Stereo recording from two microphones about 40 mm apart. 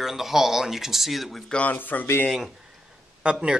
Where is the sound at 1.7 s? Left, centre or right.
Left.